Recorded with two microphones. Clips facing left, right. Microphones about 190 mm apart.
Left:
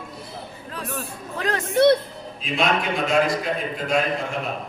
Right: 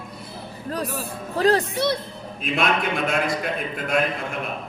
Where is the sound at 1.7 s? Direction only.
55° left (ahead or behind).